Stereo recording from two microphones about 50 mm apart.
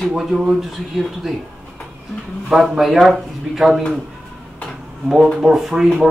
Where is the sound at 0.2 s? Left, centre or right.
Centre.